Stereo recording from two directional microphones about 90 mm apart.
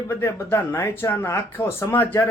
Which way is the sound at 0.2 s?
25° left (ahead or behind).